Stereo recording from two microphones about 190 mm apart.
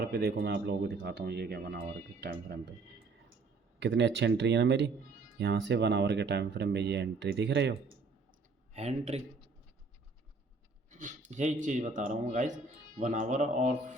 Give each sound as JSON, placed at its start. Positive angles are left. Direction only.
{"t": 0.0, "sound": "speech", "side_deg": -55}
{"t": 3.8, "sound": "speech", "side_deg": -65}
{"t": 8.7, "sound": "speech", "side_deg": -35}
{"t": 10.9, "sound": "speech", "side_deg": -40}